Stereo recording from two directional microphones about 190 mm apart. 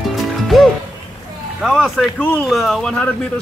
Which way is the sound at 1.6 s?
Centre (ahead or behind).